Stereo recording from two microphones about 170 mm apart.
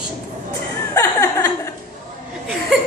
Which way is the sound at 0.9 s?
15° left (ahead or behind).